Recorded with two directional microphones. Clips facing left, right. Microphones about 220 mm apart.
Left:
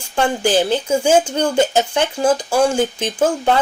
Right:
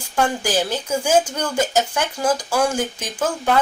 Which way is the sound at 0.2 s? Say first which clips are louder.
Left 4 dB; 30° left (ahead or behind).